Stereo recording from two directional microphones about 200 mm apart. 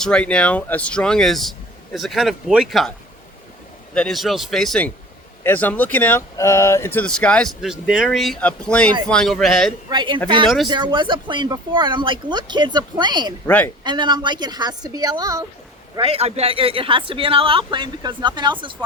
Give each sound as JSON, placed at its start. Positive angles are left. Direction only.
{"t": 0.0, "sound": "speech", "side_deg": 5}
{"t": 3.9, "sound": "speech", "side_deg": 0}
{"t": 9.9, "sound": "speech", "side_deg": -25}
{"t": 16.0, "sound": "speech", "side_deg": -30}